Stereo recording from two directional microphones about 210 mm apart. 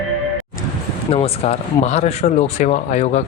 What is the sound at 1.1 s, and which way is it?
Speech, 30° left (ahead or behind).